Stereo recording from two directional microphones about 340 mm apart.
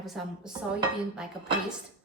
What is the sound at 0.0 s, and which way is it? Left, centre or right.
Speech, centre.